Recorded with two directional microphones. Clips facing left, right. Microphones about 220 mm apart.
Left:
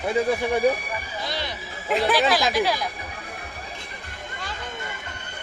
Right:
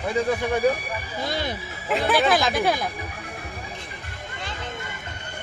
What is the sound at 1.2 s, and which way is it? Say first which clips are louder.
Speech: right 3 dB; 50° right (ahead or behind).